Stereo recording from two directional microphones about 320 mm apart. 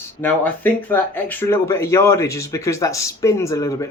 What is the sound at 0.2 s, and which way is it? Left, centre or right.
Speech, centre.